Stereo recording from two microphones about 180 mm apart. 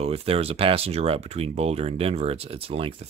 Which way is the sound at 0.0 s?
35° right (ahead or behind).